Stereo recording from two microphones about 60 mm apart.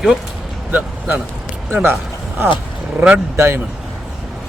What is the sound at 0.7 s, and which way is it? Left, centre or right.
Speech, right.